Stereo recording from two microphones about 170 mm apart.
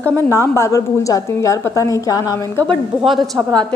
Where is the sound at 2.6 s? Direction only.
5° left (ahead or behind).